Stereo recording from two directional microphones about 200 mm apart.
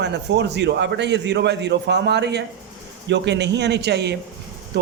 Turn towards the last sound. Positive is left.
turn(degrees=-60)  # may be behind; listen again after turning